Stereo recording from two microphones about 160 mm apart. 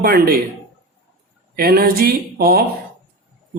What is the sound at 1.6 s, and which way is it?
Speech, 70° right (ahead or behind).